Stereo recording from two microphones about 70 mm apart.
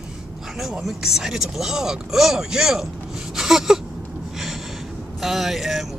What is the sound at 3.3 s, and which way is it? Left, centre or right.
Gasp, centre.